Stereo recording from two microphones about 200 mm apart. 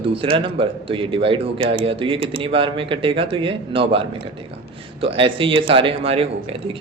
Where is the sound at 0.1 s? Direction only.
25° right (ahead or behind).